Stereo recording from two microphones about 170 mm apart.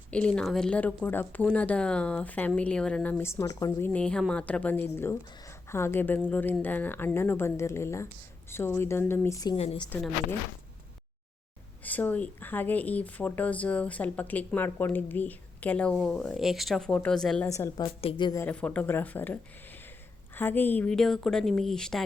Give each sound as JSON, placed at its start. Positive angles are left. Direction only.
{"t": 0.1, "sound": "speech", "side_deg": 5}
{"t": 9.6, "sound": "a woman's voice", "side_deg": 35}
{"t": 11.8, "sound": "speech", "side_deg": 10}
{"t": 17.5, "sound": "speech", "side_deg": 20}
{"t": 18.4, "sound": "a woman's voice", "side_deg": 10}